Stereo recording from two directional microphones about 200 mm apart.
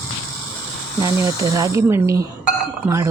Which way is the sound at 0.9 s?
15° right (ahead or behind).